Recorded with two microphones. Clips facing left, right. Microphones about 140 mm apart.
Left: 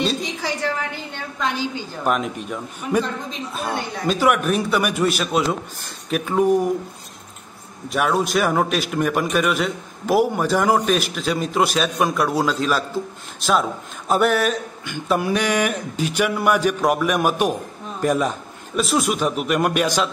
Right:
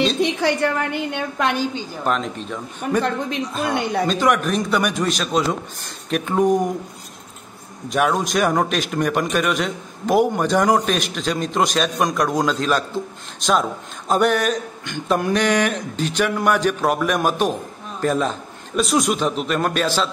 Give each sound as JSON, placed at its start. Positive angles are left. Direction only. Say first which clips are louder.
{"t": 0.2, "sound": "a woman's voice", "louder": "right 7 dB", "side_deg": -65}
{"t": 2.0, "sound": "a man's voice", "louder": "left 1 dB", "side_deg": 10}
{"t": 3.0, "sound": "a woman's voice", "louder": "right 3 dB", "side_deg": -65}
{"t": 4.1, "sound": "a man's voice", "louder": "left 4 dB", "side_deg": 5}
{"t": 7.9, "sound": "a man's voice", "louder": "even", "side_deg": 0}